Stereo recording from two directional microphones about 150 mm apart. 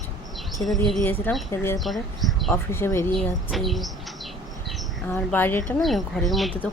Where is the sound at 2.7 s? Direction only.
15° left (ahead or behind).